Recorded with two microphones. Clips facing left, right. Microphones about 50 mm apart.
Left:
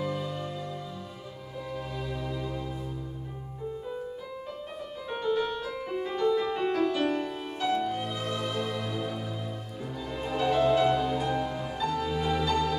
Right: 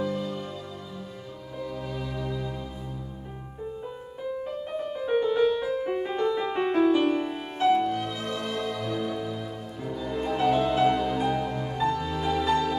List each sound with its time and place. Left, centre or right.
0.0 s music: centre
1.9 s music: centre
4.9 s music: centre
7.9 s music: centre
10.4 s music: centre